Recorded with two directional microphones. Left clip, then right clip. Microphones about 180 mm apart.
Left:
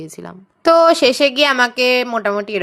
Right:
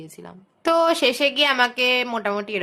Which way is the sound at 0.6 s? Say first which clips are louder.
Left 8 dB; 30° left (ahead or behind).